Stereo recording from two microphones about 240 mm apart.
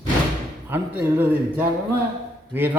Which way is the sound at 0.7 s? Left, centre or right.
Centre.